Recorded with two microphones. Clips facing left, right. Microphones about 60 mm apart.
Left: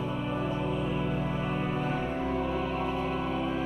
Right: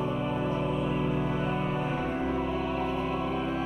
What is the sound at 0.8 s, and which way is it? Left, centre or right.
Music, centre.